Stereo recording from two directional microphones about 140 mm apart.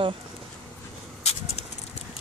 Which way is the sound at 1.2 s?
50° left (ahead or behind).